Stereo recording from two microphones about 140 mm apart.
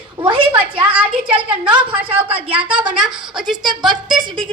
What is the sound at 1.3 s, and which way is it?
Speech, 40° right (ahead or behind).